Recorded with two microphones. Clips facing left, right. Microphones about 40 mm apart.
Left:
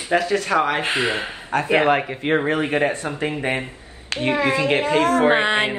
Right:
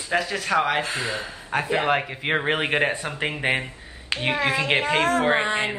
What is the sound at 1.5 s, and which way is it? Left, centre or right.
Speech, centre.